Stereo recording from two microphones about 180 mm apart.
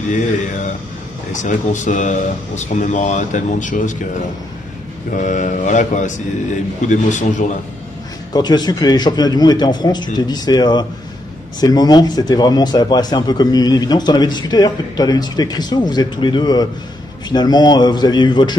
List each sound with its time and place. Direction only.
1.3 s speech: 45° left (ahead or behind)
5.1 s speech: 45° left (ahead or behind)
8.3 s a man's voice: 20° left (ahead or behind)